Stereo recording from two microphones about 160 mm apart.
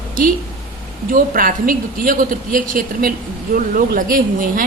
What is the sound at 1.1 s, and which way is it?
A woman's voice, 60° right (ahead or behind).